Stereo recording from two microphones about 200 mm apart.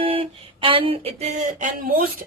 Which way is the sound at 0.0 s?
30° right (ahead or behind).